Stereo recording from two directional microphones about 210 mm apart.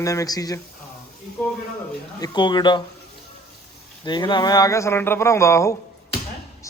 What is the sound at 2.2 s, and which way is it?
Speech, 20° left (ahead or behind).